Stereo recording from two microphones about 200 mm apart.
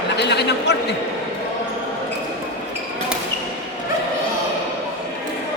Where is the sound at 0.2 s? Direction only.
60° left (ahead or behind).